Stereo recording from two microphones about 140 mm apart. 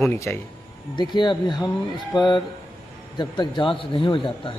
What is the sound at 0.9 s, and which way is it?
Speech, 30° left (ahead or behind).